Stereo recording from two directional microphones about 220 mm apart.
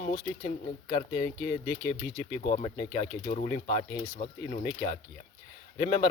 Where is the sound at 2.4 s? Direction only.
30° left (ahead or behind).